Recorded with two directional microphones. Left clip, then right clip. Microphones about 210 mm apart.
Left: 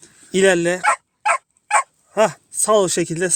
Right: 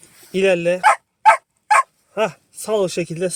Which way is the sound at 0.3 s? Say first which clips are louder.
Left 1 dB; 60° left (ahead or behind).